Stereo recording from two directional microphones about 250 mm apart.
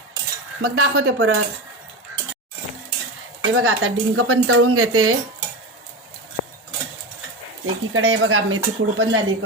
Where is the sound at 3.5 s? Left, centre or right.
Right.